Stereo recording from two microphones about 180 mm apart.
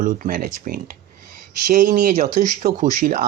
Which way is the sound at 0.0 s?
45° right (ahead or behind).